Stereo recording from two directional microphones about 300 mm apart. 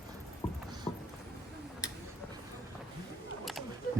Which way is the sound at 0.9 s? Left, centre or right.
Centre.